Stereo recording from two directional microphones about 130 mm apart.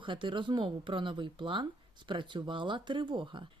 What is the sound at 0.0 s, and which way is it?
Speech, 40° right (ahead or behind).